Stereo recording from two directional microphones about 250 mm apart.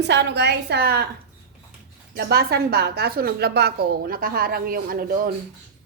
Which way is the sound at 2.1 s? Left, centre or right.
Right.